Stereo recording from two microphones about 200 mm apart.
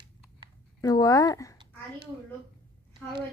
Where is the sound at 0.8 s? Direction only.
20° left (ahead or behind).